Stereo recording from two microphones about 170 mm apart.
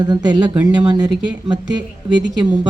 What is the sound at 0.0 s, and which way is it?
Speech, 25° right (ahead or behind).